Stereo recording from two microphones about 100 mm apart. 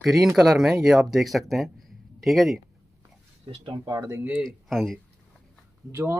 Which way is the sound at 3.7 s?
45° right (ahead or behind).